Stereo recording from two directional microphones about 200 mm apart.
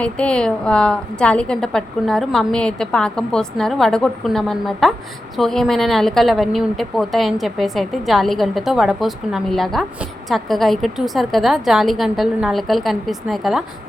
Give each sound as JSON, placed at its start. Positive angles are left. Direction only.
{"t": 0.0, "sound": "a woman's voice", "side_deg": 5}